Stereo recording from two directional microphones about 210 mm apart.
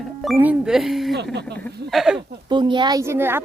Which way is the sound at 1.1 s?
55° right (ahead or behind).